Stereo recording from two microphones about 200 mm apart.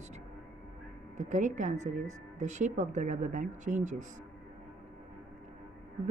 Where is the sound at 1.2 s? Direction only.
40° right (ahead or behind).